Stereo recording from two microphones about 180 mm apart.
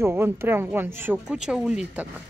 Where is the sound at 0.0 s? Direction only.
15° right (ahead or behind).